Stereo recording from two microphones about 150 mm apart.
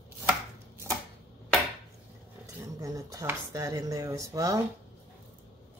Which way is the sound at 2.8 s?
20° right (ahead or behind).